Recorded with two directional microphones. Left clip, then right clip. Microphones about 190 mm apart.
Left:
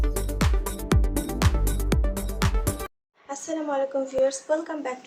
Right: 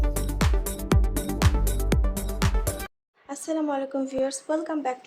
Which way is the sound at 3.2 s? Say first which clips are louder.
Right 1 dB; 40° right (ahead or behind).